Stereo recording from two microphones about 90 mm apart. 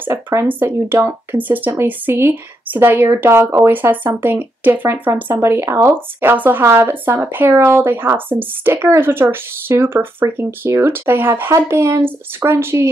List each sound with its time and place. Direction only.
0.0 s speech: 30° right (ahead or behind)
6.3 s speech: 20° right (ahead or behind)